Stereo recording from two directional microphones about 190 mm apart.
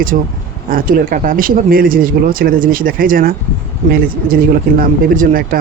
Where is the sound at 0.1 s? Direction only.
45° right (ahead or behind).